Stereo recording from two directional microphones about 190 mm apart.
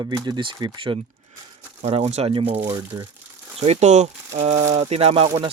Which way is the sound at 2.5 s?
10° right (ahead or behind).